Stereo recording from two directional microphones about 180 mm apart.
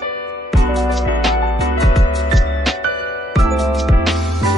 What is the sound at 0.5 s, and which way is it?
Music, centre (ahead or behind).